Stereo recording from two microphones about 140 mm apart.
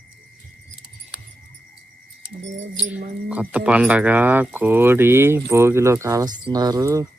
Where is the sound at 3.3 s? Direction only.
10° right (ahead or behind).